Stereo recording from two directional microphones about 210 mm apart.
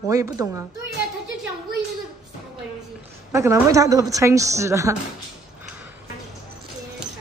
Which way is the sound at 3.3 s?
15° right (ahead or behind).